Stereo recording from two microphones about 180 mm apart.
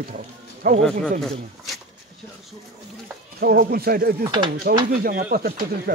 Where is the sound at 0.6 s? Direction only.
50° right (ahead or behind).